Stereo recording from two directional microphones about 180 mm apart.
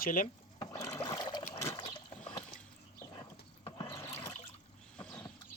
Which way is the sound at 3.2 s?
25° left (ahead or behind).